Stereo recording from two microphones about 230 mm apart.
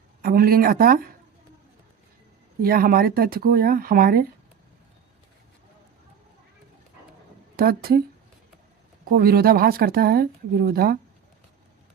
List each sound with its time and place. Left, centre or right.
0.2 s speech: right
2.6 s speech: right
7.5 s speech: right
9.0 s speech: right